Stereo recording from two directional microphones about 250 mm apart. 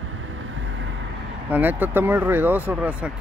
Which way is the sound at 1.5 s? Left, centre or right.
Centre.